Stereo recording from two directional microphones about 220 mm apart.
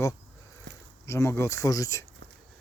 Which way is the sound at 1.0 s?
10° left (ahead or behind).